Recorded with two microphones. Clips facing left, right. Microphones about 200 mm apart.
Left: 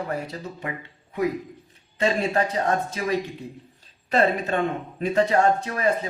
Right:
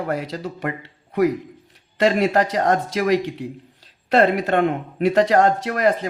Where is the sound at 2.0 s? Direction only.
80° right.